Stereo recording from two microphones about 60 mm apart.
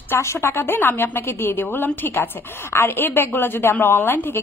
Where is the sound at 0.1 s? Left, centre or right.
Left.